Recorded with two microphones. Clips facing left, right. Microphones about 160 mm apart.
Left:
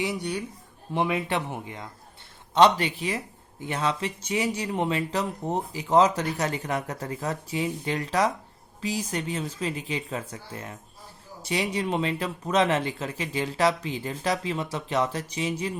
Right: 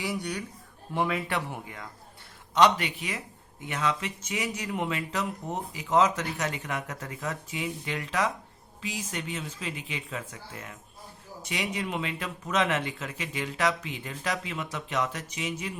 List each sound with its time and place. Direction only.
0.0 s speech: 20° left (ahead or behind)